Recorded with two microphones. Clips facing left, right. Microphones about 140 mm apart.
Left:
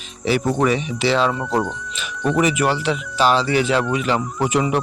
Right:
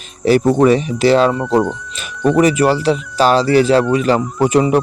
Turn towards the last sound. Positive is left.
turn(degrees=-40)  # may be behind; listen again after turning